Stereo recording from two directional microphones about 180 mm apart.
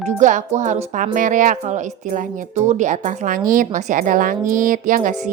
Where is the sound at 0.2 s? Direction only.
45° right (ahead or behind).